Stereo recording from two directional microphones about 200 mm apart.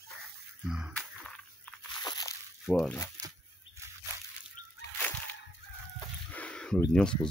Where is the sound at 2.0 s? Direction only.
20° left (ahead or behind).